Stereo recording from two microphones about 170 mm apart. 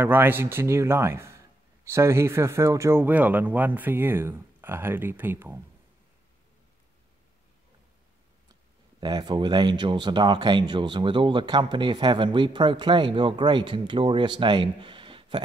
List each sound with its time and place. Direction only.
0.0 s speech: 10° right (ahead or behind)
9.0 s speech: 25° right (ahead or behind)